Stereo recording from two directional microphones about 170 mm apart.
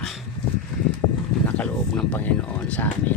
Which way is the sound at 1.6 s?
5° left (ahead or behind).